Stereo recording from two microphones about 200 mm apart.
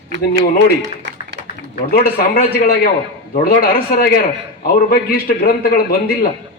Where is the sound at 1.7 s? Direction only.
50° left (ahead or behind).